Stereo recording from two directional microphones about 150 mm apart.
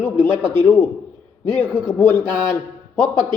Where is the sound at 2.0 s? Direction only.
15° left (ahead or behind).